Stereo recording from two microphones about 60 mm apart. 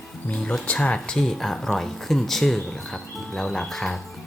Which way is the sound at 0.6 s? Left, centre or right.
Left.